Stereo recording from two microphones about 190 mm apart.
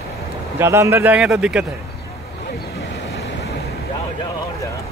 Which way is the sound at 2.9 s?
70° left (ahead or behind).